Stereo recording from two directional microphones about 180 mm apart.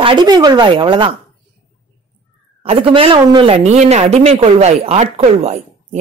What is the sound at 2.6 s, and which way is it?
Speech, 30° right (ahead or behind).